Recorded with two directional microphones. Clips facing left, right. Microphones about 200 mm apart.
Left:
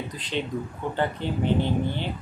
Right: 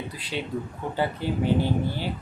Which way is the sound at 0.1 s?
10° right (ahead or behind).